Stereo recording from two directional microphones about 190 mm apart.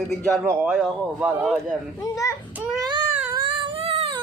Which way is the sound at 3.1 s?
10° right (ahead or behind).